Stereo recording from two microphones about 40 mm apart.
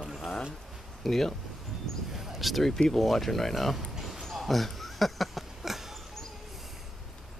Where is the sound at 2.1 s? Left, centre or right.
Centre.